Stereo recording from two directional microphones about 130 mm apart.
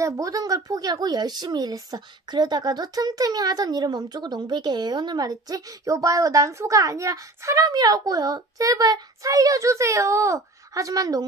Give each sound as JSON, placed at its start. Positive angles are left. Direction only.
{"t": 0.0, "sound": "a woman's voice", "side_deg": -25}